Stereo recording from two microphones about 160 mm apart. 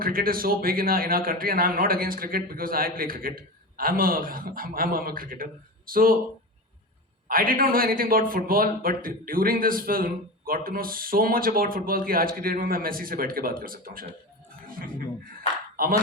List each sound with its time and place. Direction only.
0.0 s a man's voice: 65° right (ahead or behind)
7.3 s a man's voice: 60° right (ahead or behind)
15.7 s a sound: 65° right (ahead or behind)